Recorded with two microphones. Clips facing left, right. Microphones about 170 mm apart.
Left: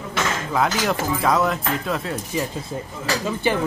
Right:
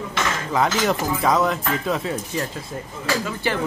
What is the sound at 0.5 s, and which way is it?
Speech, centre (ahead or behind).